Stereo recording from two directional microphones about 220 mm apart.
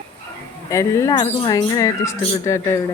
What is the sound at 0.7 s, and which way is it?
Speech, 15° left (ahead or behind).